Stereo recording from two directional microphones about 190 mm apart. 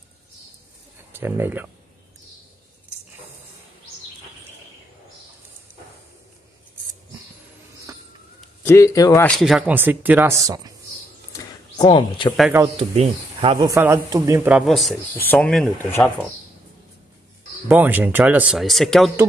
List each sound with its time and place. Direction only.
1.1 s speech: 10° right (ahead or behind)
7.9 s a sound: 20° right (ahead or behind)
8.6 s speech: 15° left (ahead or behind)
9.4 s speech: 5° right (ahead or behind)
11.3 s a sound: 25° left (ahead or behind)
12.7 s speech: 30° right (ahead or behind)
13.7 s speech: 15° right (ahead or behind)
14.7 s speech: centre (ahead or behind)
17.6 s speech: 10° right (ahead or behind)